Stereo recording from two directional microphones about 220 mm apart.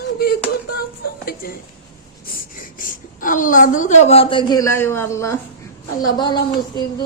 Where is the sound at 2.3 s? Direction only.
40° left (ahead or behind).